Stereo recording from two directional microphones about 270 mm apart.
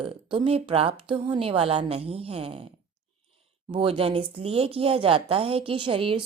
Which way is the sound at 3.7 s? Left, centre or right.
Centre.